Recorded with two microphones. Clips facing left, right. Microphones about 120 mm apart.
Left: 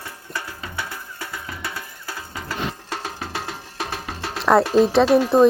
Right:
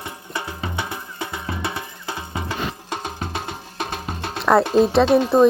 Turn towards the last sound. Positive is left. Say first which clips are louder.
# even
turn(degrees=0)  # may be behind; listen again after turning